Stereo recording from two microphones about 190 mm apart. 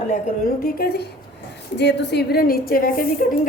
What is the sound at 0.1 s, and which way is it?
Speech, 50° left (ahead or behind).